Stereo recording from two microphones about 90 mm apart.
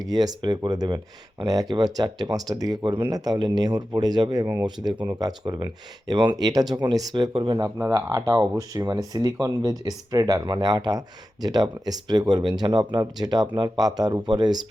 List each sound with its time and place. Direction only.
0.1 s speech: 45° right (ahead or behind)
1.5 s speech: 45° right (ahead or behind)
2.8 s speech: 55° right (ahead or behind)
6.3 s speech: 40° right (ahead or behind); by 7.6 s 60° right (ahead or behind)
7.6 s speech: 35° right (ahead or behind)
12.4 s speech: 65° right (ahead or behind)
12.9 s speech: 50° right (ahead or behind)